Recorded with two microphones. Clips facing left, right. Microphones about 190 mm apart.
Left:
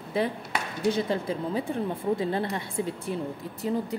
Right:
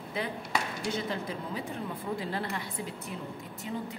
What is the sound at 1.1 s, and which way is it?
A woman's voice, 30° left (ahead or behind).